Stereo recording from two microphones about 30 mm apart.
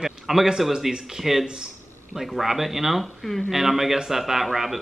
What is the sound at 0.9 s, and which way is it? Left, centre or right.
A man's voice, centre.